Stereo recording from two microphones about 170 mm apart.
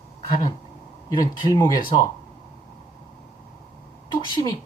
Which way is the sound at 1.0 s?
20° left (ahead or behind).